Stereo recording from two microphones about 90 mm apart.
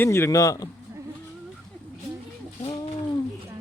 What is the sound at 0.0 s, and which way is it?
Speech, 30° left (ahead or behind).